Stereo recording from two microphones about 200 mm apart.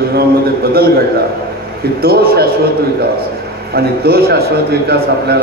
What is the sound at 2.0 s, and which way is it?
Speech, 50° right (ahead or behind).